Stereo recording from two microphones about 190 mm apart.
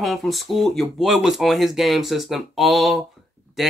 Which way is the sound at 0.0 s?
Centre (ahead or behind).